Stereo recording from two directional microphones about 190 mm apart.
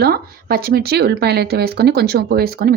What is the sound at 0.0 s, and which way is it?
Speech, 55° right (ahead or behind).